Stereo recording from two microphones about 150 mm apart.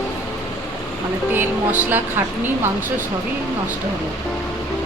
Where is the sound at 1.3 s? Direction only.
15° right (ahead or behind).